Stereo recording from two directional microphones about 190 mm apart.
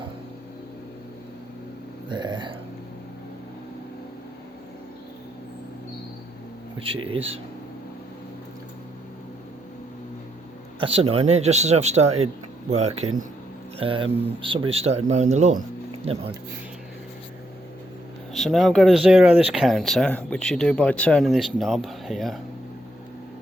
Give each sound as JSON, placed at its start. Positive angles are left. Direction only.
{"t": 2.0, "sound": "a sound", "side_deg": -25}
{"t": 6.7, "sound": "speech", "side_deg": -30}
{"t": 10.8, "sound": "speech", "side_deg": -30}
{"t": 18.3, "sound": "speech", "side_deg": 0}